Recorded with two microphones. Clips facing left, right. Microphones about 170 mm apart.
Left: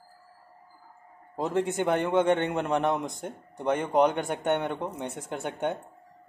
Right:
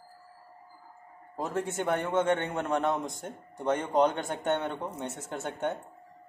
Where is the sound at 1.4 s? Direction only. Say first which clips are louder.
Left 5 dB; 20° left (ahead or behind).